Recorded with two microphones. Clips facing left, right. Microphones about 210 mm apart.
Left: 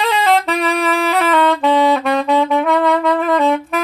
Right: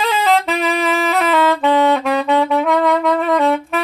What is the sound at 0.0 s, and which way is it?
Saxophone, centre (ahead or behind).